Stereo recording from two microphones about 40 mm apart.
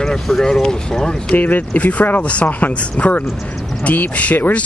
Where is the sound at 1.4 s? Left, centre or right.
Left.